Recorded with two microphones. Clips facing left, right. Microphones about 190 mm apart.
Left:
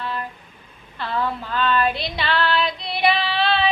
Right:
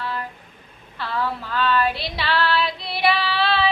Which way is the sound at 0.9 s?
20° left (ahead or behind).